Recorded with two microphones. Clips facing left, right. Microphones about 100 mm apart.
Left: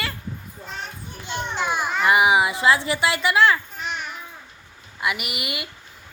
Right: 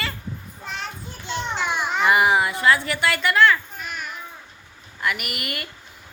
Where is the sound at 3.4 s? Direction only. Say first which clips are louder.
Right 1 dB; 25° left (ahead or behind).